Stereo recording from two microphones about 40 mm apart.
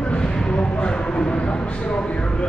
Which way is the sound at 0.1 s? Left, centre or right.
Left.